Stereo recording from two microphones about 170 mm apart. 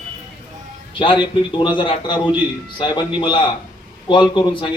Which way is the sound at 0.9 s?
30° left (ahead or behind).